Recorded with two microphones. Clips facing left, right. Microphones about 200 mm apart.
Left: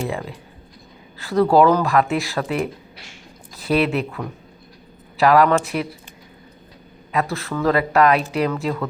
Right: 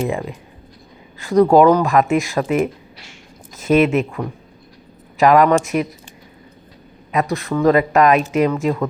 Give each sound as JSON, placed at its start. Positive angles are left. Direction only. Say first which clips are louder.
{"t": 0.0, "sound": "speech", "louder": "right 4 dB", "side_deg": -20}
{"t": 7.1, "sound": "speech", "louder": "right 4 dB", "side_deg": -20}